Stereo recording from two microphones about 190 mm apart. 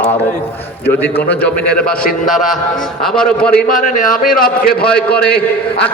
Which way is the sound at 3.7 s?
45° left (ahead or behind).